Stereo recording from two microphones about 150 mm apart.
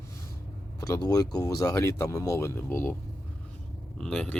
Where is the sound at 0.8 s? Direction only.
25° left (ahead or behind).